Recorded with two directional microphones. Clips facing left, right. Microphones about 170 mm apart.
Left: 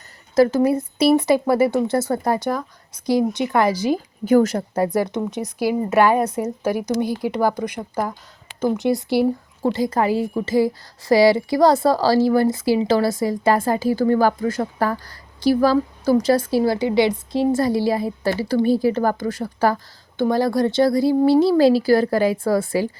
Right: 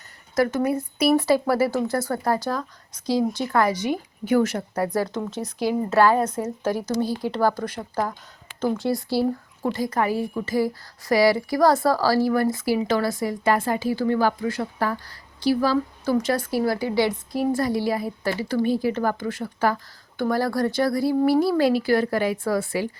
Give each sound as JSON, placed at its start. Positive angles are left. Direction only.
{"t": 0.3, "sound": "a woman's voice", "side_deg": 30}
{"t": 4.3, "sound": "a woman's voice", "side_deg": 40}
{"t": 4.9, "sound": "a woman's voice", "side_deg": 20}
{"t": 20.2, "sound": "a woman's voice", "side_deg": 20}